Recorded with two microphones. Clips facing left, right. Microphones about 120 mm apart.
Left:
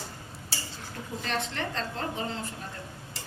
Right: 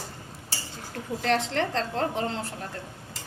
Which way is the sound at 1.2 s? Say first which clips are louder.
Right 7 dB; 80° right.